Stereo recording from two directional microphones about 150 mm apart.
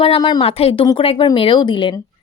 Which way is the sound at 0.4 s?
40° left (ahead or behind).